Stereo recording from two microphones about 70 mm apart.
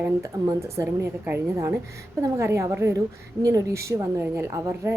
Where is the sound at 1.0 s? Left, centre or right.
Right.